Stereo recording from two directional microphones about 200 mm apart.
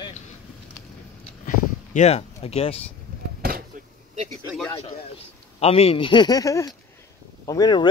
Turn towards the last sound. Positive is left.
turn(degrees=20)  # may be behind; listen again after turning